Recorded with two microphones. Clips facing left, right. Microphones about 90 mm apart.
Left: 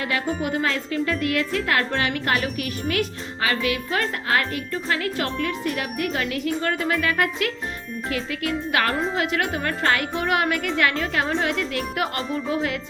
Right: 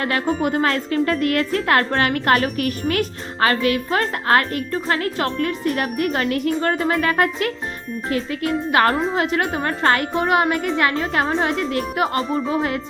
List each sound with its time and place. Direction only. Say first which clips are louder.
0.0 s a woman's voice: right 5 dB; 45° right (ahead or behind)